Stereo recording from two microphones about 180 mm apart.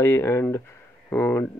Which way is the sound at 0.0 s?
15° left (ahead or behind).